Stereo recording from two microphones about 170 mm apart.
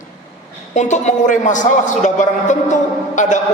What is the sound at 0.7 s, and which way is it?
A man's voice, 45° left (ahead or behind).